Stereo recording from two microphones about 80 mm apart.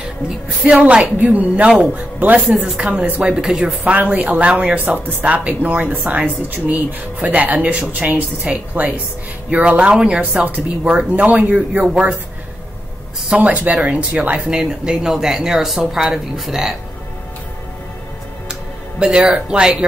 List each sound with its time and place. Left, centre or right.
0.7 s a woman's voice: centre
13.3 s speech: centre
18.5 s music: centre